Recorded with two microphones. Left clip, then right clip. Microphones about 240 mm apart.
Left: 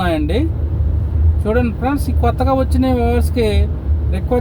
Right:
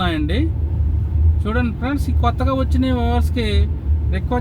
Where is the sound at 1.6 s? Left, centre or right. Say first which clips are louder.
Left 4 dB; left.